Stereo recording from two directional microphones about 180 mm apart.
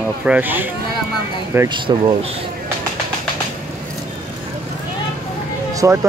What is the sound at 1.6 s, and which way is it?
Speech, 25° right (ahead or behind).